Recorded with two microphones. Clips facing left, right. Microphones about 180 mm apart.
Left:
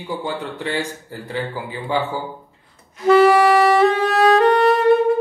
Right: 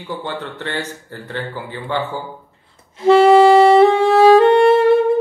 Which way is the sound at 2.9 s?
25° right (ahead or behind).